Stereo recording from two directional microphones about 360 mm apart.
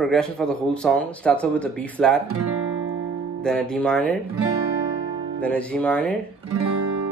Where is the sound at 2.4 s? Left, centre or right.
Right.